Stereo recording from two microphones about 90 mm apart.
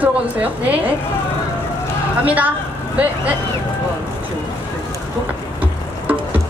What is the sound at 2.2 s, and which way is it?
Speech, 15° right (ahead or behind).